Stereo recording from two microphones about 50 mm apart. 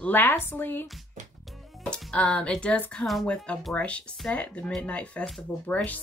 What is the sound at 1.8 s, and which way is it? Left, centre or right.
Speech, left.